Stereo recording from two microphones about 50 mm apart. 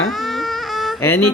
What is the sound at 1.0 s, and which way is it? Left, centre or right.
Speech, left.